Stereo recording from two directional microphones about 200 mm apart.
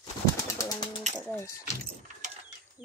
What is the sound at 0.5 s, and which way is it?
Pigeon, 20° left (ahead or behind).